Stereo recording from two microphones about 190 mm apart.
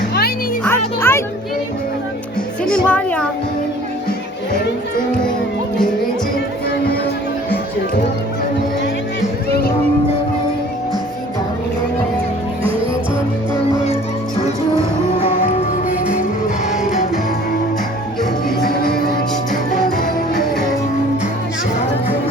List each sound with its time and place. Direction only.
0.6 s music: 10° left (ahead or behind)
2.6 s music: 5° left (ahead or behind)
18.6 s music: 50° left (ahead or behind)